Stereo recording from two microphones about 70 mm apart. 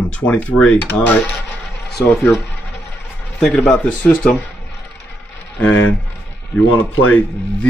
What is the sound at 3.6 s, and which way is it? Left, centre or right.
Speech, centre.